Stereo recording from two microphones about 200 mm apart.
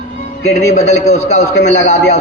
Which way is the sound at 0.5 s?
35° left (ahead or behind).